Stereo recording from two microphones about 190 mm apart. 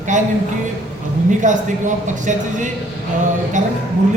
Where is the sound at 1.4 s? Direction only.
40° right (ahead or behind).